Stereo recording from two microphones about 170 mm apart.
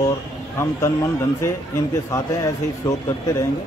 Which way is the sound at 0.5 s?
15° left (ahead or behind).